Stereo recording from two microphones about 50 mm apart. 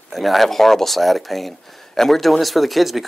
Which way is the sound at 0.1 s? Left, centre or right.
Centre.